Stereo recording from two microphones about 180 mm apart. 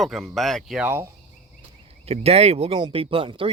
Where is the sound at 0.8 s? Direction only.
10° right (ahead or behind).